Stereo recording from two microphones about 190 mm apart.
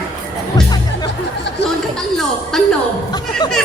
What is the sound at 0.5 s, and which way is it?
Music, 20° left (ahead or behind).